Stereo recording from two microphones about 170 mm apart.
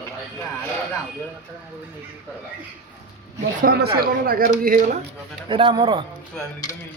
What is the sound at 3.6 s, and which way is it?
Speech, 65° right (ahead or behind).